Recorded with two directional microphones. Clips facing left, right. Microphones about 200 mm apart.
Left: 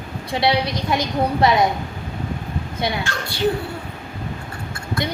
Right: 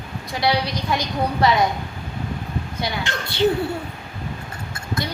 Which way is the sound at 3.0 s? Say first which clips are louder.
Right 2 dB; 25° right (ahead or behind).